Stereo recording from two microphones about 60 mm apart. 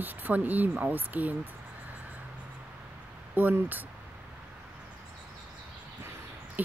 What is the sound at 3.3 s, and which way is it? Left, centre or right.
Speech, right.